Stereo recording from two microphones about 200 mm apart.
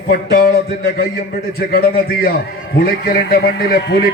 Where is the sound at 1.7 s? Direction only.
50° left (ahead or behind).